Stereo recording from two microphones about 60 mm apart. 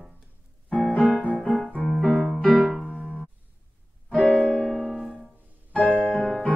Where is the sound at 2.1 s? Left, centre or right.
Right.